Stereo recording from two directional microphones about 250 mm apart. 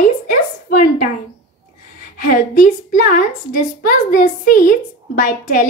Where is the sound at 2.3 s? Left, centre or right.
Left.